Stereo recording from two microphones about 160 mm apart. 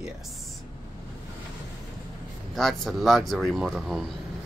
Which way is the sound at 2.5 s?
Centre (ahead or behind).